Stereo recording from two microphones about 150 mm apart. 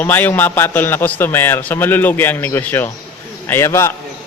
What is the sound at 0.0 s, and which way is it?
A man's voice, 15° left (ahead or behind).